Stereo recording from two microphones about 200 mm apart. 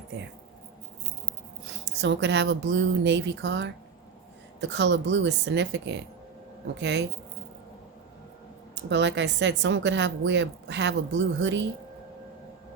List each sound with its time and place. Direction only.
1.6 s a woman's voice: 60° right (ahead or behind)
8.7 s a woman's voice: 60° right (ahead or behind)